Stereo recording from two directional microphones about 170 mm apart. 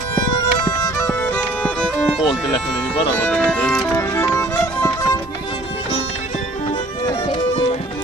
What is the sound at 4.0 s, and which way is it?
Music, 15° left (ahead or behind).